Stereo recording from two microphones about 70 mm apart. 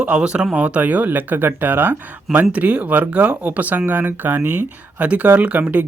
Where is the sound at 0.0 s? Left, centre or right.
Centre.